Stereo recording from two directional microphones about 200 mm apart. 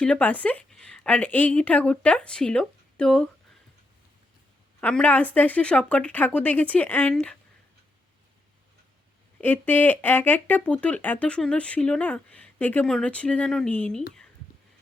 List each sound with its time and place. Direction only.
0.0 s speech: 5° left (ahead or behind)
4.8 s speech: 5° left (ahead or behind)
9.4 s speech: 10° left (ahead or behind)